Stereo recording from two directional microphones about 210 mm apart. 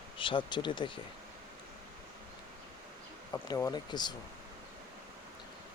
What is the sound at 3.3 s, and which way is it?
Speech, 15° left (ahead or behind).